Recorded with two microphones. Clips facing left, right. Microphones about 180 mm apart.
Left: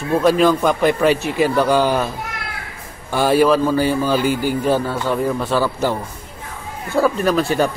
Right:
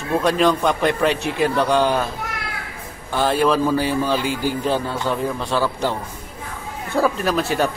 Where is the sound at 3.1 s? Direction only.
10° left (ahead or behind).